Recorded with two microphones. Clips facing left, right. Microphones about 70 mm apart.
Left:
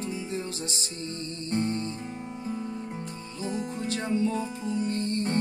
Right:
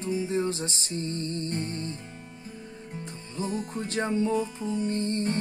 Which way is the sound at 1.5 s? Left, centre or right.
Left.